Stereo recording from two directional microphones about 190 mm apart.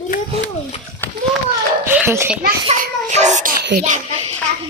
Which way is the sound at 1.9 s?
10° right (ahead or behind).